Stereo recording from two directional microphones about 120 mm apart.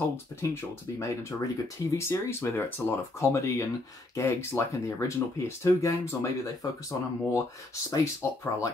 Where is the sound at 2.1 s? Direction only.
20° left (ahead or behind).